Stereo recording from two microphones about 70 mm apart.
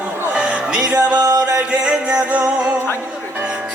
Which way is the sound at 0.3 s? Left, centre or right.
Centre.